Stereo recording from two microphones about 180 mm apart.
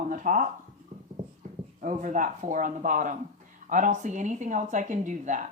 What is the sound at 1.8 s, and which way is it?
Speech, 45° right (ahead or behind).